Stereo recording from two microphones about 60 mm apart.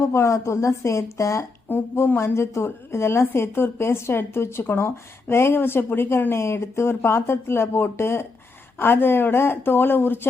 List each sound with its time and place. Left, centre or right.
0.1 s speech: left
1.7 s speech: left